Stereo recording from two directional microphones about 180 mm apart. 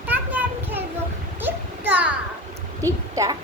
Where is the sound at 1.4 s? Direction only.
10° right (ahead or behind).